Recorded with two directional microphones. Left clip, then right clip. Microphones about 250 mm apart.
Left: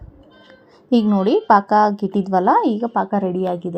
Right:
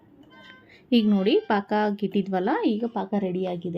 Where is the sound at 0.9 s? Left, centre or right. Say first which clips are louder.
Left 5 dB; centre.